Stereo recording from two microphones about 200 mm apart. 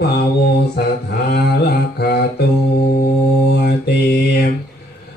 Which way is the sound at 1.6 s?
55° left (ahead or behind).